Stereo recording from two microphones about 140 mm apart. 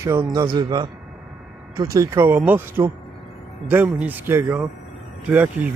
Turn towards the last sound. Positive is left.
turn(degrees=-10)  # may be behind; listen again after turning